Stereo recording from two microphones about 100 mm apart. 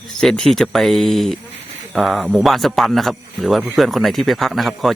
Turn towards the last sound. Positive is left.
turn(degrees=0)  # may be behind; listen again after turning